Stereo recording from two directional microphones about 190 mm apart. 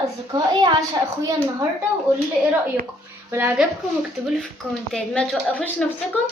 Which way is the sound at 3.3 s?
10° right (ahead or behind).